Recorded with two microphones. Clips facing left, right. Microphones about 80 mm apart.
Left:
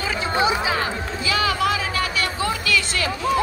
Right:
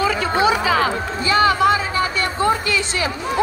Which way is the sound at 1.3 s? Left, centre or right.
Right.